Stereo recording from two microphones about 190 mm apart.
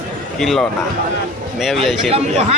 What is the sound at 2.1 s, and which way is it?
Speech, 30° right (ahead or behind).